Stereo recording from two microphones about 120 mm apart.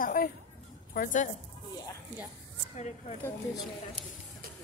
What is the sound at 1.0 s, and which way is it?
Speech, 90° left.